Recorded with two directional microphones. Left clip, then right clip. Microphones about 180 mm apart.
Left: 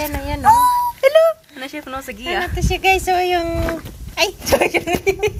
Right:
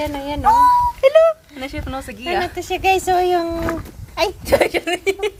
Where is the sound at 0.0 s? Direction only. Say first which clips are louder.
Left 1 dB; 10° left (ahead or behind); by 2.5 s 25° left (ahead or behind).